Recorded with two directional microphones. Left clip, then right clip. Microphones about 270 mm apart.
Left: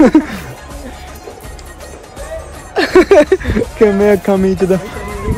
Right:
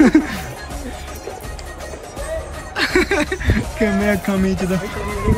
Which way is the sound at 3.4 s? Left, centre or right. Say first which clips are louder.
Left 8 dB; centre.